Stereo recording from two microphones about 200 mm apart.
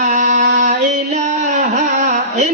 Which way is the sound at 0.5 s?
35° right (ahead or behind).